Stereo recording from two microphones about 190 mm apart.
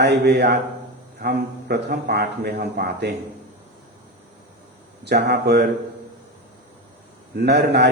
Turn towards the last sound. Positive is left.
turn(degrees=-60)  # may be behind; listen again after turning